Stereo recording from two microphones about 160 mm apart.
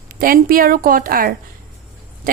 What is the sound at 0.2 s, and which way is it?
A woman's voice, 60° right (ahead or behind).